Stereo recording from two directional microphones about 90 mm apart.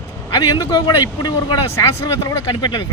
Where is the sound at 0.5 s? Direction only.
50° left (ahead or behind).